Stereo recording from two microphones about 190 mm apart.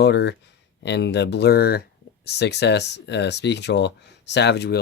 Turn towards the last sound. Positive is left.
turn(degrees=60)  # may be behind; listen again after turning